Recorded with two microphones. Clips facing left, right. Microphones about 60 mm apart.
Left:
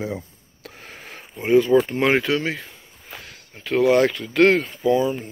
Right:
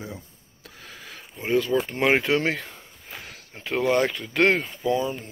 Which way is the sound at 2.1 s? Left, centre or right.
Centre.